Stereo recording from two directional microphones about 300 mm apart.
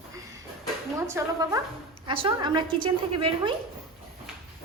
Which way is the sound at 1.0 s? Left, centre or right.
Centre.